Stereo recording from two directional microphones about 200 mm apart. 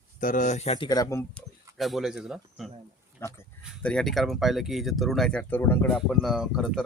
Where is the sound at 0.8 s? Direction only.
20° left (ahead or behind).